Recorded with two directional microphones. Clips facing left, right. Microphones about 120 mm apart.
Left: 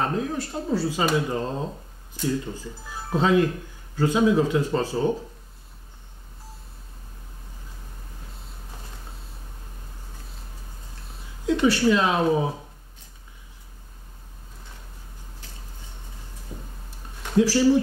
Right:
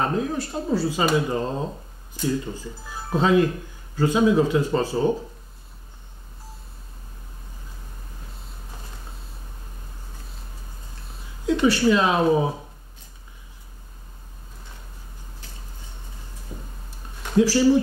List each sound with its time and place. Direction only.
0.0 s speech: 15° right (ahead or behind)
11.4 s speech: 15° right (ahead or behind)
16.5 s tick-tock: 10° right (ahead or behind)
17.2 s a sound: 20° right (ahead or behind)
17.5 s speech: 10° right (ahead or behind)